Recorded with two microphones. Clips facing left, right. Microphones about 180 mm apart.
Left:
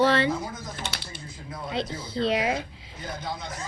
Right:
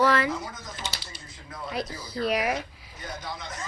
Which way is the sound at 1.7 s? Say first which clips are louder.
Left 2 dB; 25° left (ahead or behind).